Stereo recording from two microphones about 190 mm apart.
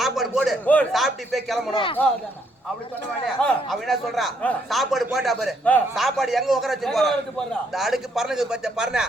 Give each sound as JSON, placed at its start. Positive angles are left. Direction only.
{"t": 0.0, "sound": "a man's voice", "side_deg": 0}
{"t": 1.7, "sound": "a man's voice", "side_deg": 25}
{"t": 3.4, "sound": "speech", "side_deg": 5}